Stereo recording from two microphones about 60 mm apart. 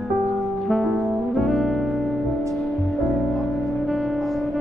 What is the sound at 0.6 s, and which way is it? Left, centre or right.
Music, centre.